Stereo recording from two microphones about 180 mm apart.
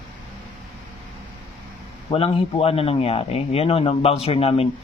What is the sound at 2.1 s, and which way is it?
A man's voice, 30° left (ahead or behind).